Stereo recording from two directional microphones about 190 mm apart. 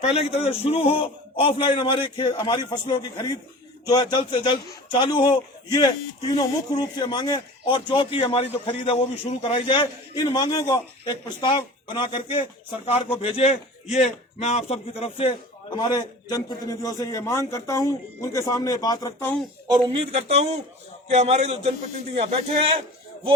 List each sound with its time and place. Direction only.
0.1 s a man's voice: 30° left (ahead or behind)
19.6 s a man's voice: 25° right (ahead or behind)